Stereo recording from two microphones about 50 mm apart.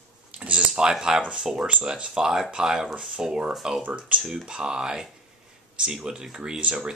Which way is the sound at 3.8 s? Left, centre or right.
Right.